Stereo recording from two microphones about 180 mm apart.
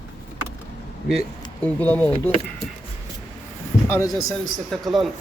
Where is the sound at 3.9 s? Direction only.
15° left (ahead or behind).